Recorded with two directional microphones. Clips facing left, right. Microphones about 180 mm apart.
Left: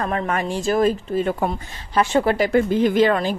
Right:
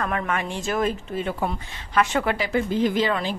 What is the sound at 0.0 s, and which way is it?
A woman's voice, 35° left (ahead or behind).